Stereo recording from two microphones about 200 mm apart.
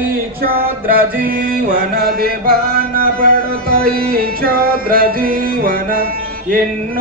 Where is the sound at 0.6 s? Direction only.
45° right (ahead or behind).